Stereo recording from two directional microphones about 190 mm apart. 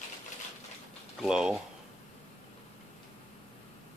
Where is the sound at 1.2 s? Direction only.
5° right (ahead or behind).